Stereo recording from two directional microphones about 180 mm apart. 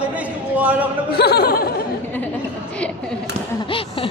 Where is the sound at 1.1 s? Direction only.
60° left (ahead or behind).